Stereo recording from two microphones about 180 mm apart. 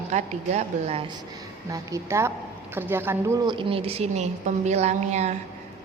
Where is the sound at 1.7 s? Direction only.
15° right (ahead or behind); by 5.3 s 40° right (ahead or behind).